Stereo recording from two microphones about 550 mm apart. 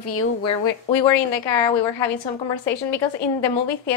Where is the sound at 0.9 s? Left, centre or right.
Left.